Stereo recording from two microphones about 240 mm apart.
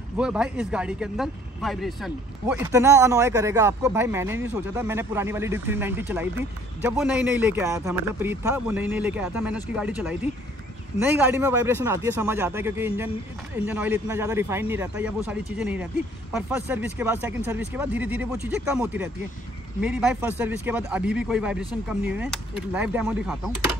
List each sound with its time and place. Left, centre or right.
0.2 s speech: centre